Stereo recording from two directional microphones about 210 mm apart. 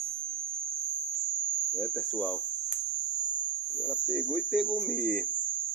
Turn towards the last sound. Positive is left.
turn(degrees=0)  # may be behind; listen again after turning